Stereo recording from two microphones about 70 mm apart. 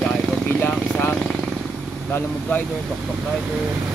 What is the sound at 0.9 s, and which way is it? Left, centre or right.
Vehicle, centre.